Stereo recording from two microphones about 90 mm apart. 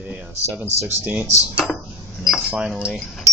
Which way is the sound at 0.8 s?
20° right (ahead or behind).